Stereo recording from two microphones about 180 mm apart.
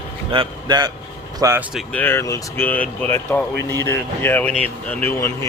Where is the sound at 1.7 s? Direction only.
10° left (ahead or behind).